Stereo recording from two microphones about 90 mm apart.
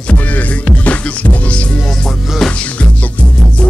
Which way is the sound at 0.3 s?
15° left (ahead or behind).